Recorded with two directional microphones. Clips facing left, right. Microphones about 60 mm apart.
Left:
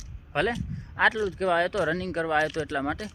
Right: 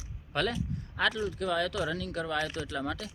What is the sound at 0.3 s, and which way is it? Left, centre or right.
Speech, left.